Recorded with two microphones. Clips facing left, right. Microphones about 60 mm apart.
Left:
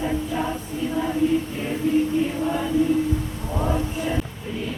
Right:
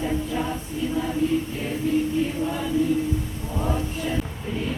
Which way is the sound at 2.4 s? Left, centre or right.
Centre.